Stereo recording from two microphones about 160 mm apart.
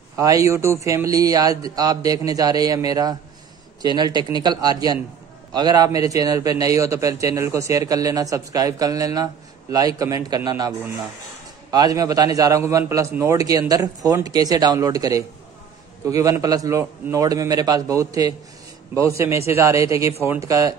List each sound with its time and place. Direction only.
0.1 s a man's voice: 20° right (ahead or behind)
11.7 s a man's voice: 25° right (ahead or behind)